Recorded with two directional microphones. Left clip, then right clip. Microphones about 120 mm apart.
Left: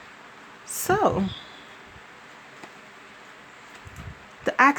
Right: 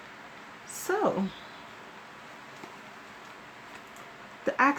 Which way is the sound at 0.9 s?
90° left.